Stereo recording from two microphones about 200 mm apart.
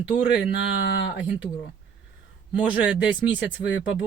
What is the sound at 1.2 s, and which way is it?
Speech, 5° right (ahead or behind).